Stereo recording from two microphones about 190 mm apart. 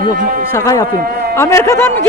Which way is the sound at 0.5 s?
15° left (ahead or behind).